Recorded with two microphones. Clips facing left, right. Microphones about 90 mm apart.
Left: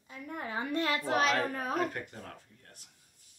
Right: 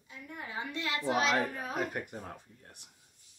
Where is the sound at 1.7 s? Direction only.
15° right (ahead or behind).